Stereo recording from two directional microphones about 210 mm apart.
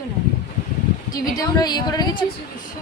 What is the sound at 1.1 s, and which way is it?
A woman's voice, 20° left (ahead or behind).